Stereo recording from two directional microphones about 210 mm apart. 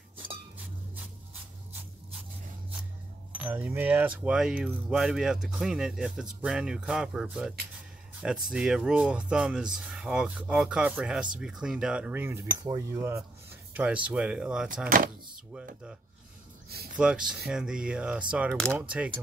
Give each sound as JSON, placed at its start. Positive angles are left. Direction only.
{"t": 3.3, "sound": "speech", "side_deg": -10}
{"t": 16.9, "sound": "speech", "side_deg": -5}